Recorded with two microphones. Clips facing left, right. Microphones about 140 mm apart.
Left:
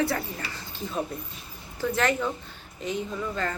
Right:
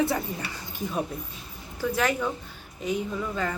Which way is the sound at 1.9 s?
10° right (ahead or behind).